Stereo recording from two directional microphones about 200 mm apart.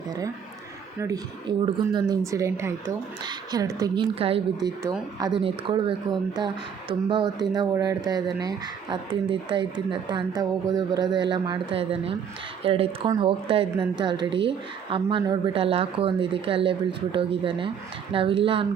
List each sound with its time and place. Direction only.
0.9 s speech: 15° right (ahead or behind)